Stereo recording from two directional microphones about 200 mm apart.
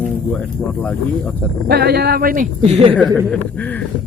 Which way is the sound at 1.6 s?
50° right (ahead or behind).